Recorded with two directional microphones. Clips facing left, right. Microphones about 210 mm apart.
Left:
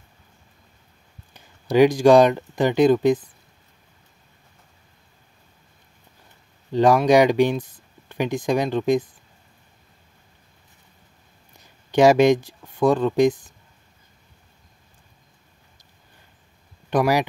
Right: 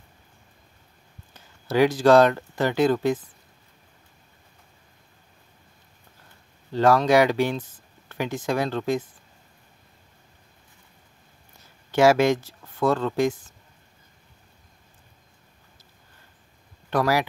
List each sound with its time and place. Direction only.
1.3 s speech: 15° left (ahead or behind)
6.7 s speech: 15° left (ahead or behind)
11.9 s speech: 15° left (ahead or behind)
16.9 s speech: 15° left (ahead or behind)